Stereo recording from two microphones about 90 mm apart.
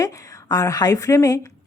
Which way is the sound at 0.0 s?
40° left (ahead or behind).